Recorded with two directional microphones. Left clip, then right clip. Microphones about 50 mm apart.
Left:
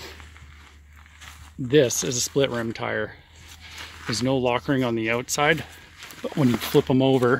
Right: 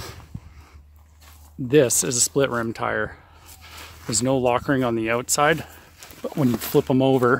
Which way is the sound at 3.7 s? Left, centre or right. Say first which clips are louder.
Even; centre.